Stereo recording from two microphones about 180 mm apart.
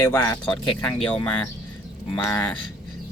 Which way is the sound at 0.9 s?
5° left (ahead or behind).